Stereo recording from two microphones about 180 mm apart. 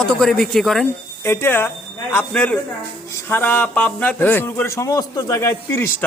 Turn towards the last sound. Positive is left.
turn(degrees=15)  # may be behind; listen again after turning